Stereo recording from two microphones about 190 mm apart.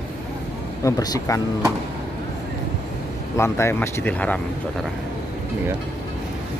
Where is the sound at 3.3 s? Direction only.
15° left (ahead or behind).